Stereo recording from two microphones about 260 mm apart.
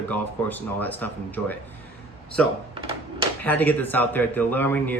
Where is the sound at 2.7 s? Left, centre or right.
Right.